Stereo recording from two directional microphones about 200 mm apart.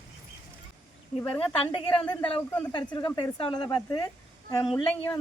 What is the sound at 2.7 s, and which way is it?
Speech, 20° left (ahead or behind).